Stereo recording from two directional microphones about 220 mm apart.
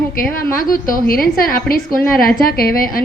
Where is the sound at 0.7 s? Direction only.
40° left (ahead or behind).